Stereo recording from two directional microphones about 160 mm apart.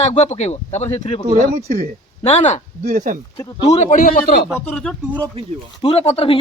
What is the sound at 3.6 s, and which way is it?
Speech, 45° left (ahead or behind).